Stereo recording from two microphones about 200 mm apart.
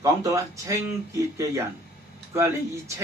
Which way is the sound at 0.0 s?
15° right (ahead or behind).